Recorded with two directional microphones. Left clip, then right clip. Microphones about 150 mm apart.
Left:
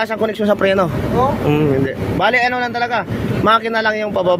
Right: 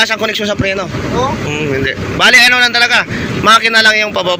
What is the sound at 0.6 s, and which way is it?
Speech, 55° left (ahead or behind).